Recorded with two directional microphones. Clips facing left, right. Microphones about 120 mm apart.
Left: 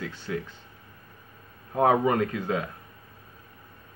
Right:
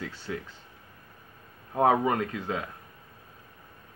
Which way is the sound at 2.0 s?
20° right (ahead or behind).